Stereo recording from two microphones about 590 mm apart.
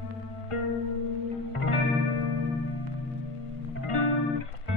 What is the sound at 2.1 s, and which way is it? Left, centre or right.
Music, right.